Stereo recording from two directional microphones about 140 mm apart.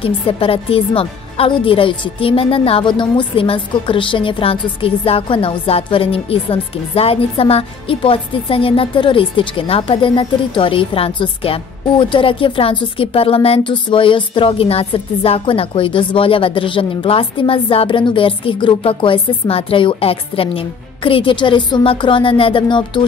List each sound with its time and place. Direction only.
0.0 s a woman's voice: 40° left (ahead or behind)